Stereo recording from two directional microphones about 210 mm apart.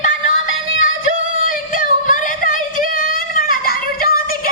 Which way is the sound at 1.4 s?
40° left (ahead or behind).